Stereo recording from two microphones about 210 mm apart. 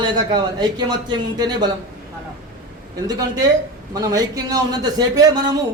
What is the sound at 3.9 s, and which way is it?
A man's voice, 15° right (ahead or behind).